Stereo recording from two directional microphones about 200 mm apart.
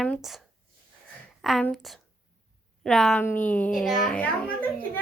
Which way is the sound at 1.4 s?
Centre (ahead or behind).